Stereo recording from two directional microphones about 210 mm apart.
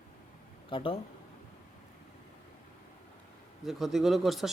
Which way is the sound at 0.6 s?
25° left (ahead or behind).